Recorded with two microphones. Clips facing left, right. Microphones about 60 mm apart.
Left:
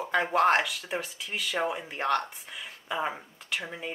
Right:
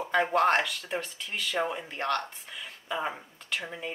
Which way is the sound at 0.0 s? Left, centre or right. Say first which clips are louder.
Even; centre.